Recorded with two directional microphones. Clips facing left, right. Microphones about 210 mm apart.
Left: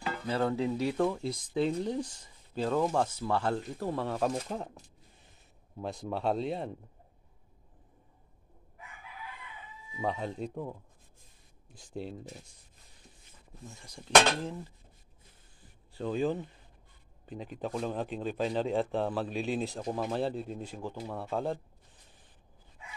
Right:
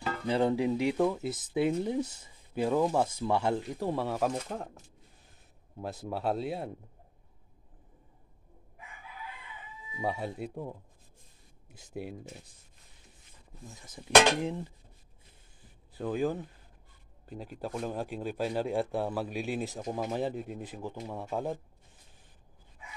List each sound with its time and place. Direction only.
0.3 s speech: 15° right (ahead or behind)
1.0 s speech: 5° right (ahead or behind)
10.0 s speech: 10° right (ahead or behind)
11.9 s speech: 10° right (ahead or behind)
13.7 s speech: centre (ahead or behind)
16.0 s speech: 5° right (ahead or behind)